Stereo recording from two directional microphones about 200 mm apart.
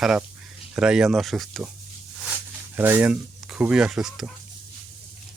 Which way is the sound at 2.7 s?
10° right (ahead or behind).